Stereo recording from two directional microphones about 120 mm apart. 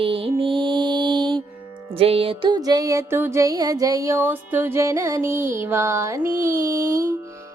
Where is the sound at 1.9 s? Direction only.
50° right (ahead or behind).